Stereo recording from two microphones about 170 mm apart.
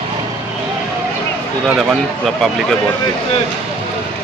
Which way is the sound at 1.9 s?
Centre (ahead or behind).